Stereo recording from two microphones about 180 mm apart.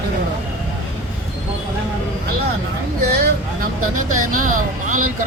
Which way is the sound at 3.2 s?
50° right (ahead or behind).